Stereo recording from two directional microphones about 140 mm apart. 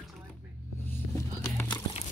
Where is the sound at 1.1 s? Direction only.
20° left (ahead or behind).